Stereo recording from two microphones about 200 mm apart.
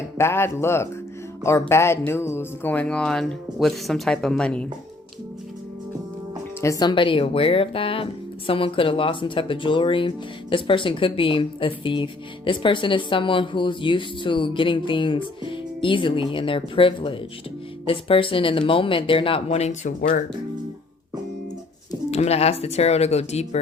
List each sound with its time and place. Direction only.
0.2 s speech: 10° left (ahead or behind)
6.6 s a woman's voice: 15° left (ahead or behind); by 20.2 s 40° left (ahead or behind)
22.1 s speech: 30° left (ahead or behind)